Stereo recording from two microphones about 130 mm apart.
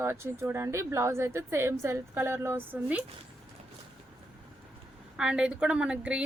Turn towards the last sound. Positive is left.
turn(degrees=-10)  # may be behind; listen again after turning